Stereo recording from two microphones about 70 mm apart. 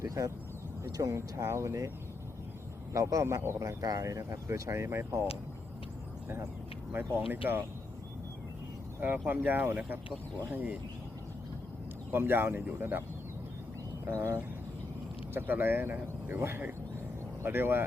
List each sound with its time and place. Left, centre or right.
0.0 s speech: right
1.5 s speech: right
2.9 s speech: right
7.2 s speech: right
9.2 s speech: right
12.1 s a man's voice: right
14.0 s speech: right
15.3 s a man's voice: right